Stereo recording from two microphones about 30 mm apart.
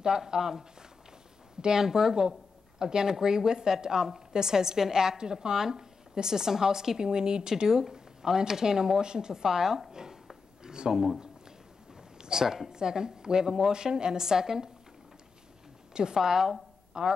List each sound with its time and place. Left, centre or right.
0.0 s a woman's voice: right
10.6 s a sound: right
10.9 s speech: centre
12.2 s a sound: centre
12.6 s a woman's voice: right
15.9 s a woman's voice: right
16.2 s a woman's voice: centre